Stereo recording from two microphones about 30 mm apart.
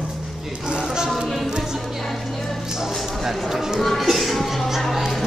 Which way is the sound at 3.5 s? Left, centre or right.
Centre.